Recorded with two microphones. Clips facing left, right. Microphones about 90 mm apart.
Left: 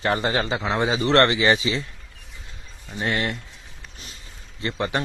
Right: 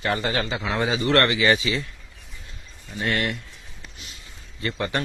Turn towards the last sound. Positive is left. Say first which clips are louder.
# left 1 dB
turn(degrees=15)  # may be behind; listen again after turning